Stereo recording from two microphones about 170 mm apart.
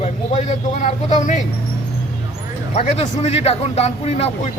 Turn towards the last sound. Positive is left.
turn(degrees=40)  # may be behind; listen again after turning